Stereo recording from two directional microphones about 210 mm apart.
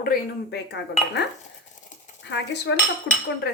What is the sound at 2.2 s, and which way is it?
Cutlery, 55° left (ahead or behind).